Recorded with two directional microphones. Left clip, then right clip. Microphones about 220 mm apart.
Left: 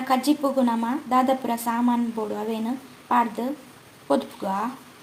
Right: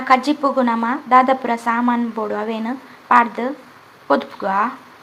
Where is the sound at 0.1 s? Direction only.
Centre (ahead or behind).